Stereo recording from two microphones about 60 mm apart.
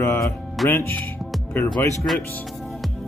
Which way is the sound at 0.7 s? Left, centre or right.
Left.